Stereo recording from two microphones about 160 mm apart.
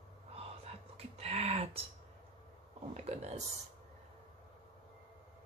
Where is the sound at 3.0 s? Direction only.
45° right (ahead or behind).